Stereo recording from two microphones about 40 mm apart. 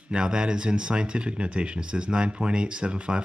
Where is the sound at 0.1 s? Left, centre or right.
Right.